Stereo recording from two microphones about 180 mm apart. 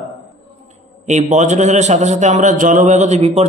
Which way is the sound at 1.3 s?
40° right (ahead or behind).